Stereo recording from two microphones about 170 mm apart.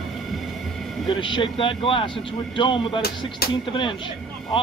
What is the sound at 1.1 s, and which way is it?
A man's voice, 30° left (ahead or behind).